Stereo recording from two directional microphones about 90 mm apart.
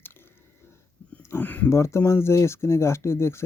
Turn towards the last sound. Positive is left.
turn(degrees=30)  # may be behind; listen again after turning